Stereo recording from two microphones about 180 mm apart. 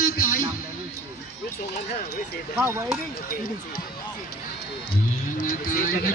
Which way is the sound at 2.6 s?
15° right (ahead or behind).